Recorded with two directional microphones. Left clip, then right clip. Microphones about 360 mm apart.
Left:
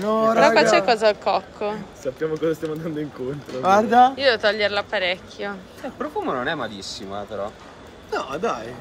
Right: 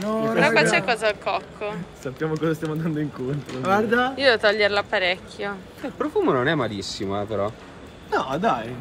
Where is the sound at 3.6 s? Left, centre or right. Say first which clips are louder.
Left 6 dB; centre.